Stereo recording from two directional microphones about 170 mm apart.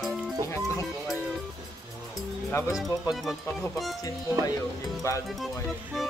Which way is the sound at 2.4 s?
15° left (ahead or behind).